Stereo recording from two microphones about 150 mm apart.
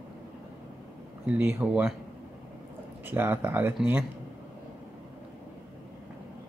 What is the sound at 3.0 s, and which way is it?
Speech, 15° right (ahead or behind).